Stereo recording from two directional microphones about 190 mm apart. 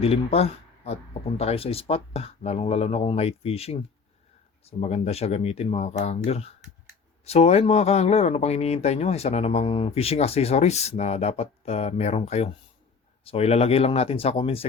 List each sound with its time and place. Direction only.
0.0 s speech: 30° left (ahead or behind)